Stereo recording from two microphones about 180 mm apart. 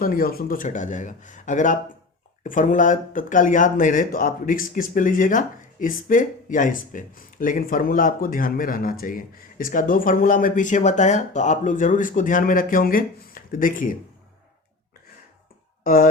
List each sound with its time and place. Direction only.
0.0 s speech: 55° left (ahead or behind)
15.8 s speech: 50° left (ahead or behind)